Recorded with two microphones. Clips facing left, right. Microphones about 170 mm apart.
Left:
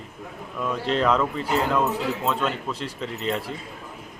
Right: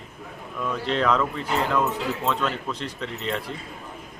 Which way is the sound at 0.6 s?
5° left (ahead or behind).